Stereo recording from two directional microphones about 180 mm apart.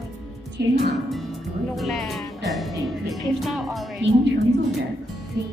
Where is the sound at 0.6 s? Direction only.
65° right (ahead or behind).